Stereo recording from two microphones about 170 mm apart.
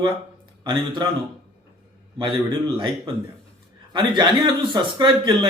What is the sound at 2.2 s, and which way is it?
Speech, 30° right (ahead or behind).